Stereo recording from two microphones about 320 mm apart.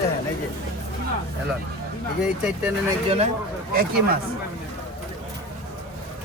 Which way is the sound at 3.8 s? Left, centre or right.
Right.